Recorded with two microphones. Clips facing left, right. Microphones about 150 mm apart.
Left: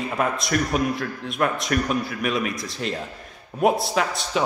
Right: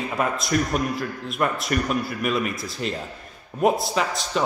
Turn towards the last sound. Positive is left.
turn(degrees=0)  # may be behind; listen again after turning